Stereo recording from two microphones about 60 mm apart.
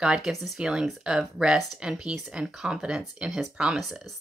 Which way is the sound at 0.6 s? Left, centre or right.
Centre.